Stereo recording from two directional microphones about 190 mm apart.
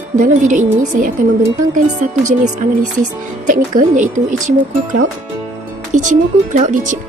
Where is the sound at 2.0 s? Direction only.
40° right (ahead or behind).